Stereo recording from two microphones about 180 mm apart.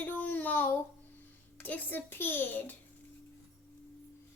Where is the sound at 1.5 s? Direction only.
10° left (ahead or behind).